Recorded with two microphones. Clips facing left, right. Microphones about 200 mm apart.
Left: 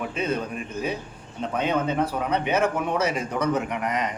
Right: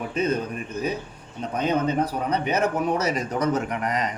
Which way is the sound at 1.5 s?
40° right (ahead or behind).